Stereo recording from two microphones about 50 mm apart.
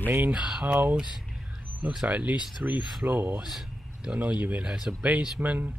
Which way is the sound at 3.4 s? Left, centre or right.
Centre.